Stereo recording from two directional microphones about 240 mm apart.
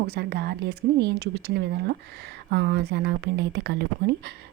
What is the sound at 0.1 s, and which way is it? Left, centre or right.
Speech, right.